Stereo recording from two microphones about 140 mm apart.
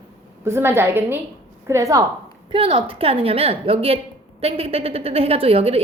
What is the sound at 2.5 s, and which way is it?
A woman's voice, 40° right (ahead or behind).